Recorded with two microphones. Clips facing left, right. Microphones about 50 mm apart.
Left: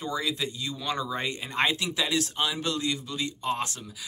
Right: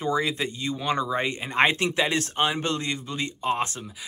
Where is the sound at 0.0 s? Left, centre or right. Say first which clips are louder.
Right 5 dB; right.